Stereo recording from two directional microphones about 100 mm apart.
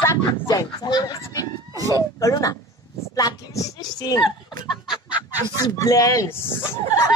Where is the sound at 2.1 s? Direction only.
35° left (ahead or behind).